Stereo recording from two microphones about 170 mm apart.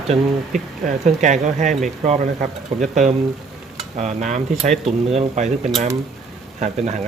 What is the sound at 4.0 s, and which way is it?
Speech, 40° right (ahead or behind).